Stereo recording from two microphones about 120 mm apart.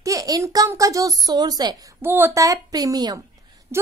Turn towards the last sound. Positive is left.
turn(degrees=-20)  # may be behind; listen again after turning